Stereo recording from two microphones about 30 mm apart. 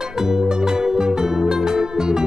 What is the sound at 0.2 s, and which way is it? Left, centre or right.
Music, centre.